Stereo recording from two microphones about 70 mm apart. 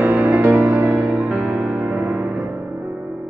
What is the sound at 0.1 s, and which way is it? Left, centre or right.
Music, right.